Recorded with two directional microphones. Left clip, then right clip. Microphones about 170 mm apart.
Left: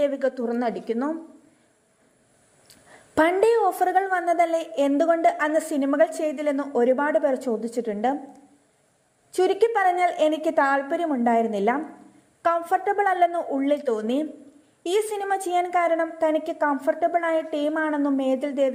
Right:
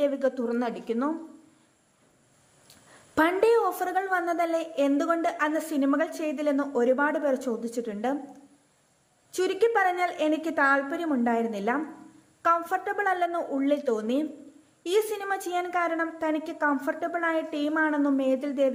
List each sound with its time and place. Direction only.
0.0 s a woman's voice: 15° left (ahead or behind)
3.2 s a woman's voice: 15° left (ahead or behind)
9.3 s a woman's voice: 10° left (ahead or behind)